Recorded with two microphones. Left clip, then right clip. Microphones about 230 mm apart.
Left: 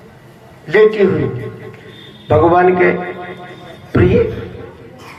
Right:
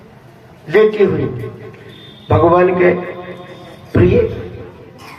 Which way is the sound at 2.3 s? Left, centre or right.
Left.